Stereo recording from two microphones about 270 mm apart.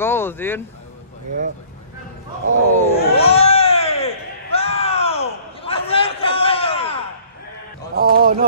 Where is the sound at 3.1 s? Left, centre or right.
Left.